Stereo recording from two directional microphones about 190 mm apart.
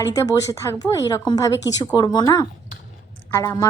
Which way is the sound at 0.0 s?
15° left (ahead or behind).